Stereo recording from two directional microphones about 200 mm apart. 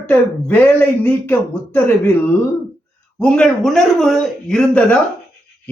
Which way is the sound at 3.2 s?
5° left (ahead or behind).